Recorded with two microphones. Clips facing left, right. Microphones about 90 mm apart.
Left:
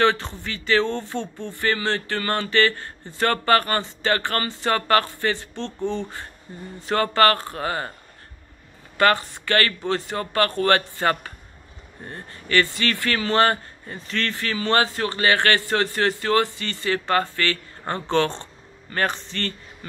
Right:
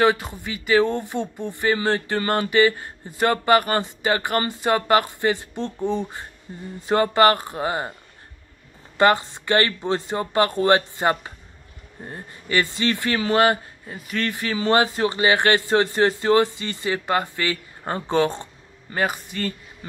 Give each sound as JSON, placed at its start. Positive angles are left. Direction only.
{"t": 0.0, "sound": "speech", "side_deg": -10}
{"t": 8.9, "sound": "speech", "side_deg": -20}